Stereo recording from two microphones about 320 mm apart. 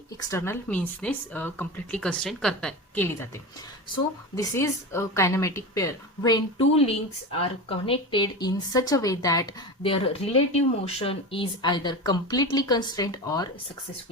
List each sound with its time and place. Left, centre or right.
0.2 s speech: centre
4.4 s a woman's voice: centre